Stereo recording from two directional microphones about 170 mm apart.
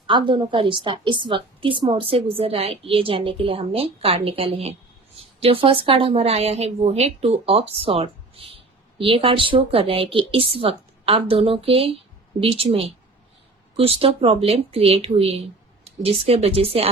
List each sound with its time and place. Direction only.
0.1 s a woman's voice: 30° right (ahead or behind)